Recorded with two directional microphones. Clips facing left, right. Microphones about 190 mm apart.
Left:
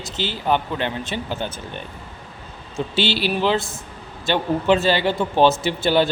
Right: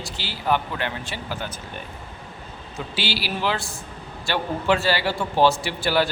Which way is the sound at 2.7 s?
25° left (ahead or behind).